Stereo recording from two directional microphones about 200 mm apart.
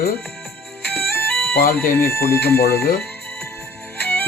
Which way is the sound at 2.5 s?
50° left (ahead or behind).